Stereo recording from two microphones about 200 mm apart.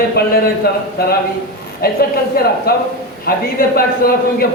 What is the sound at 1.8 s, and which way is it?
A man's voice, 50° left (ahead or behind).